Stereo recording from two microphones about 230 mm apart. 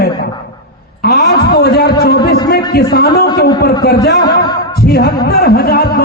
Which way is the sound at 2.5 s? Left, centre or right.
Left.